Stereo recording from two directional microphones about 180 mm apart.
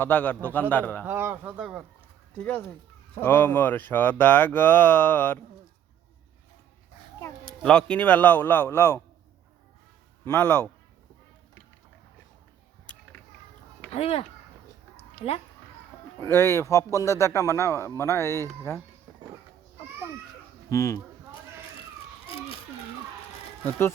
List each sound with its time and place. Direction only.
0.0 s a man's voice: 10° left (ahead or behind)
1.0 s speech: 10° right (ahead or behind)
3.2 s a man's voice: 10° left (ahead or behind)
7.4 s a man's voice: 5° left (ahead or behind)
10.2 s a man's voice: 10° left (ahead or behind)
12.9 s a sound: 5° left (ahead or behind)
13.9 s speech: 30° left (ahead or behind)
16.2 s a man's voice: 15° left (ahead or behind)
20.7 s a man's voice: 15° left (ahead or behind)
22.3 s a sound: 30° left (ahead or behind)
23.6 s a man's voice: 15° left (ahead or behind)